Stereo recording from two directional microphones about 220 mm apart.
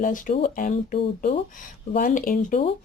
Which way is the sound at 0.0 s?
40° left (ahead or behind).